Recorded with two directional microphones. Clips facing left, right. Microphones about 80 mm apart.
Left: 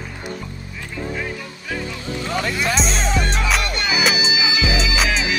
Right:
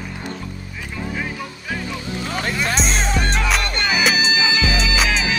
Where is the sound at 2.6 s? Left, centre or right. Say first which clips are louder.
Even; right.